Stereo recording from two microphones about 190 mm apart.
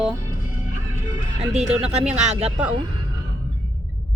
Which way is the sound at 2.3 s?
30° right (ahead or behind).